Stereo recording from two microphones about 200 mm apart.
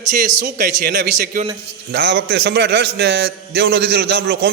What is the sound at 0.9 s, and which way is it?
A man's voice, 60° right (ahead or behind).